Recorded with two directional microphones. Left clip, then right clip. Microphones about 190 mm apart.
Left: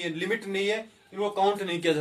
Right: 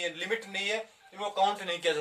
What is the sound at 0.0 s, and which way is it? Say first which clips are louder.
A man's voice: left 3 dB; 15° left (ahead or behind).